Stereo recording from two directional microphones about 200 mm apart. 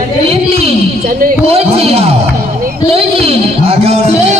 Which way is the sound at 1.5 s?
30° right (ahead or behind).